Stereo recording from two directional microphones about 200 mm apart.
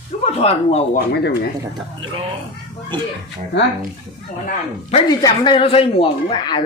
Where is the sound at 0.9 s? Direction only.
55° left (ahead or behind).